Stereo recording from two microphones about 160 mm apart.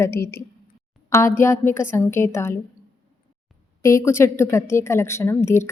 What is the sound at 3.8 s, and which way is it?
A woman's voice, 20° left (ahead or behind).